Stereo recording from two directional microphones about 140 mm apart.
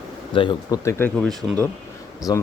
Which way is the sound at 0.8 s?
15° left (ahead or behind).